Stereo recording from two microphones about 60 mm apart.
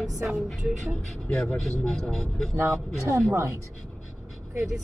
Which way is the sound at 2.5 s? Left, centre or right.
Right.